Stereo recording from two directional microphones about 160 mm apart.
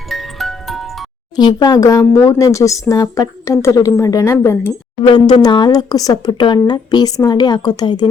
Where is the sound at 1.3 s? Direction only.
25° left (ahead or behind).